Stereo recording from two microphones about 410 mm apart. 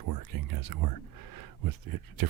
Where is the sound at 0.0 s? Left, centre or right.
Right.